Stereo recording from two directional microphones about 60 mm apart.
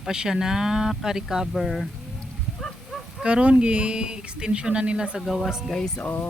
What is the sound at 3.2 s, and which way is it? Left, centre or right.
Speech, centre.